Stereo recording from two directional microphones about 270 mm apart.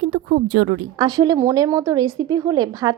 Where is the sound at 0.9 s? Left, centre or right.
Centre.